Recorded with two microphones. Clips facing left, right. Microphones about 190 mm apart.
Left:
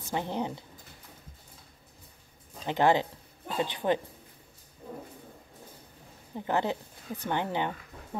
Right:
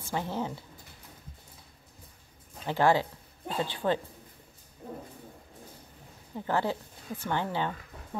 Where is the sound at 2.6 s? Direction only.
20° left (ahead or behind).